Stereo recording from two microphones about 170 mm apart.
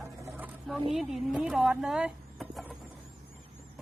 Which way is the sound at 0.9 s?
Centre (ahead or behind).